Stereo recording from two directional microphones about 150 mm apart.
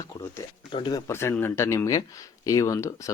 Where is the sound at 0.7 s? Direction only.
30° left (ahead or behind).